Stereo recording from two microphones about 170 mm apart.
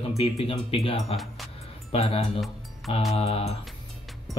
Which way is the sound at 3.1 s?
35° left (ahead or behind).